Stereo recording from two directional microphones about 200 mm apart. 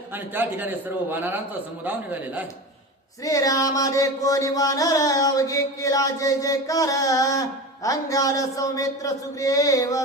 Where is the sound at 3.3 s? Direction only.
15° left (ahead or behind).